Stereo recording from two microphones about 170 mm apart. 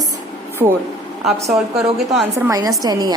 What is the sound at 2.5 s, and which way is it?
Speech, 20° right (ahead or behind).